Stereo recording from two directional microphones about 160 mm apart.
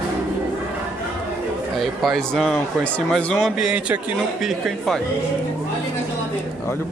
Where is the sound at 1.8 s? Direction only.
Centre (ahead or behind).